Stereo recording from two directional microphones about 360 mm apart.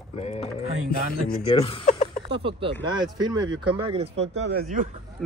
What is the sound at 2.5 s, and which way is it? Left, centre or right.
Speech, centre.